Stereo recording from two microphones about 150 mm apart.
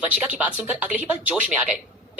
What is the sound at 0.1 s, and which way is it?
A woman's voice, 5° right (ahead or behind).